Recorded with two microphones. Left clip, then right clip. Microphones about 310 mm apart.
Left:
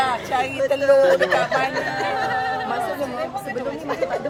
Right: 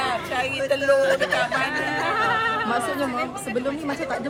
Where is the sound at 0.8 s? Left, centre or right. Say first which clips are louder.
Left 5 dB; centre.